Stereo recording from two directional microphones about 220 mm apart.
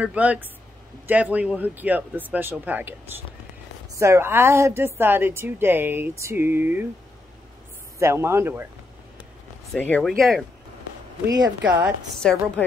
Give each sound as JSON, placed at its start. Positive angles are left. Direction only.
{"t": 0.0, "sound": "a woman's voice", "side_deg": -5}
{"t": 8.0, "sound": "a woman's voice", "side_deg": -10}
{"t": 9.7, "sound": "speech", "side_deg": 5}
{"t": 11.2, "sound": "a woman's voice", "side_deg": -15}
{"t": 12.2, "sound": "speech", "side_deg": 5}